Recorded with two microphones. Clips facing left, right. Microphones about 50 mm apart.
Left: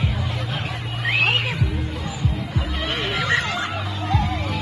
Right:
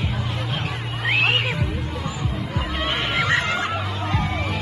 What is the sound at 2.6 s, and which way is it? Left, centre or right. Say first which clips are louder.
Music: right 3 dB; right.